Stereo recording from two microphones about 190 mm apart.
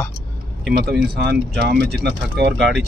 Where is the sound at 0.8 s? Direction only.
55° right (ahead or behind).